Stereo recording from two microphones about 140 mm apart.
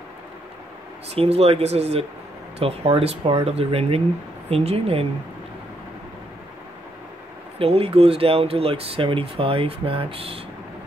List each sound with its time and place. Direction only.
1.1 s speech: 45° right (ahead or behind)
7.5 s speech: 45° right (ahead or behind)